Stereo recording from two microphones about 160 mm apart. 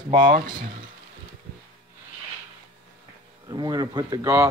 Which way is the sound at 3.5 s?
25° right (ahead or behind).